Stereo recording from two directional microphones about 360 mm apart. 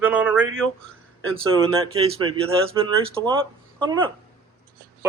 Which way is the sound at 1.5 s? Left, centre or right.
Centre.